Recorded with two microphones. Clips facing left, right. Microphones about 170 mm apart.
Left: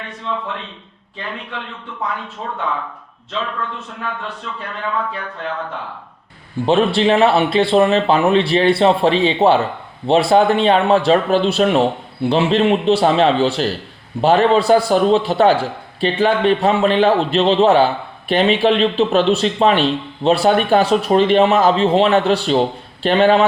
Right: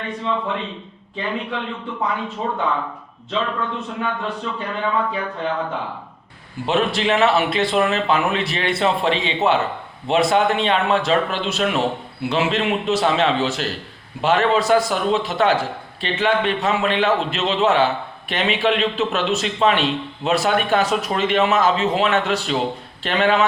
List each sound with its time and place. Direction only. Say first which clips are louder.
0.0 s speech: right 2 dB; centre (ahead or behind)
6.7 s a man's voice: left 5 dB; 30° left (ahead or behind)